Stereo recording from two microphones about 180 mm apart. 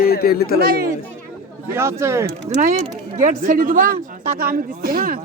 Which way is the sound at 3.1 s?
45° right (ahead or behind).